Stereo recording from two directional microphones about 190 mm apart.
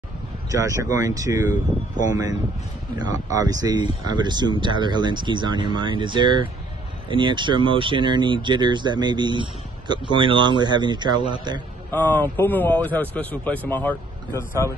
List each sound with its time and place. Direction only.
0.5 s speech: 15° right (ahead or behind)
3.4 s speech: 20° right (ahead or behind)
11.9 s a man's voice: 10° left (ahead or behind)